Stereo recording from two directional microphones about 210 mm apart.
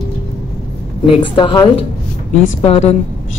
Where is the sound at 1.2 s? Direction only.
20° left (ahead or behind).